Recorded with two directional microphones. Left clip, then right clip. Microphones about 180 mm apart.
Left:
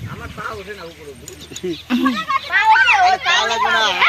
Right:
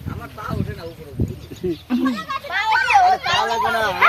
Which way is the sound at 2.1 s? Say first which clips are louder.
Left 6 dB; 65° right (ahead or behind).